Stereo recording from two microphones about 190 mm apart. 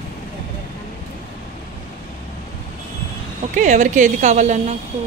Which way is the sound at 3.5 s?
40° right (ahead or behind).